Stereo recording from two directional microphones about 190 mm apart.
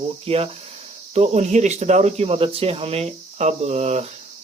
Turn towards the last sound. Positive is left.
turn(degrees=-35)  # may be behind; listen again after turning